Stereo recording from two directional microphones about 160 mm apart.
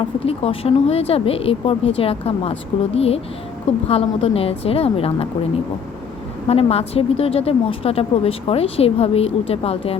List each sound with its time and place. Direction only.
0.0 s a woman's voice: 35° left (ahead or behind)
6.5 s a woman's voice: 40° left (ahead or behind)